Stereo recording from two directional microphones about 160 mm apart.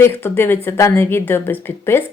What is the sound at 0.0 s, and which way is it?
Speech, 15° left (ahead or behind).